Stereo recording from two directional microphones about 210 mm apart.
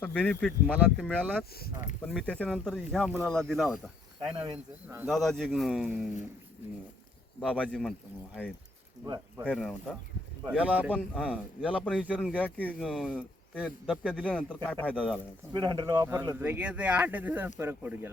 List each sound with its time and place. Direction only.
0.0 s speech: 5° left (ahead or behind)
4.4 s speech: 15° right (ahead or behind)
5.0 s speech: centre (ahead or behind)
7.4 s speech: 5° left (ahead or behind)
9.5 s speech: 5° left (ahead or behind)
12.3 s speech: 5° left (ahead or behind)
15.5 s speech: 20° right (ahead or behind)